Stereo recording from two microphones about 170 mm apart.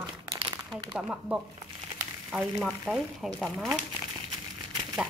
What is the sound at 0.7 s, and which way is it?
Speech, 5° right (ahead or behind).